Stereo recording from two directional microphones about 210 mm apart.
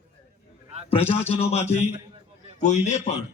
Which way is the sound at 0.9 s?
30° left (ahead or behind).